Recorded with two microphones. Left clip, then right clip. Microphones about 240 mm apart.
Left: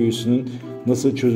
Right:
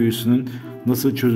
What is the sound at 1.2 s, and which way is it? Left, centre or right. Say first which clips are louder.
Speech: even; right.